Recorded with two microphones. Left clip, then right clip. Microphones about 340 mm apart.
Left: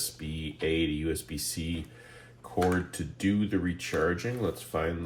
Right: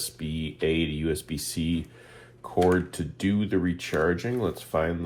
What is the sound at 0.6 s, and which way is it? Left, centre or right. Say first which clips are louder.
Speech: right 2 dB; centre.